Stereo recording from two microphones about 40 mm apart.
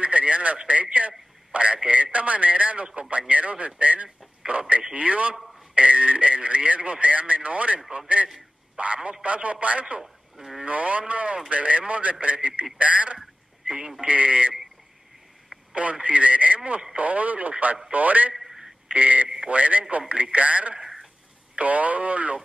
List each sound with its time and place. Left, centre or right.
0.0 s radio: right
0.6 s speech: right
10.0 s speech: centre
10.6 s speech: right
15.7 s speech: right
18.4 s telephone: centre
18.9 s speech: right
19.2 s speech: right
19.5 s speech: right